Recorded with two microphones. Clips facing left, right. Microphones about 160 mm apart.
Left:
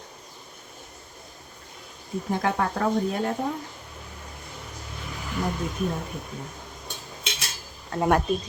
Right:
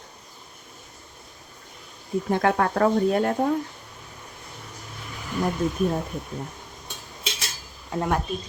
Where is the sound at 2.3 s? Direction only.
60° right (ahead or behind).